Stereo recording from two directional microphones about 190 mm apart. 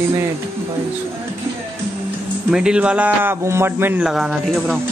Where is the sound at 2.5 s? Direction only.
5° right (ahead or behind).